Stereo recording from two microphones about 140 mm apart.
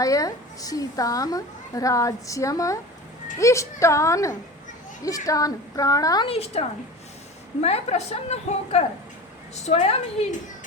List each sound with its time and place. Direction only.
0.0 s a woman's voice: 25° left (ahead or behind)
6.2 s a woman's voice: 45° left (ahead or behind)